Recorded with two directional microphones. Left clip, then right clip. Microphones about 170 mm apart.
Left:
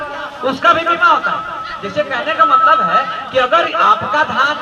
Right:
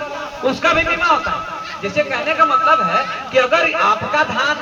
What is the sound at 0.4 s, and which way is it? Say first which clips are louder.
A man's voice: left 3 dB; 10° right (ahead or behind).